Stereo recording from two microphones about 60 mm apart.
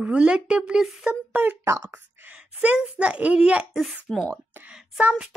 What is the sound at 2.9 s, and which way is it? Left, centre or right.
Speech, right.